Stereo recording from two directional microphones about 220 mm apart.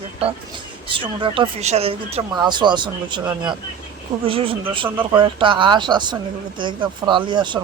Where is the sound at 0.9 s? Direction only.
20° right (ahead or behind).